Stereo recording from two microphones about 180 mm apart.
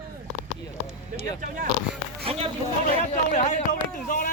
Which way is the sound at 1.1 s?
50° right (ahead or behind).